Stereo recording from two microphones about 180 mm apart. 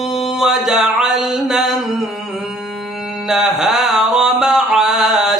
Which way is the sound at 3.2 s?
5° right (ahead or behind).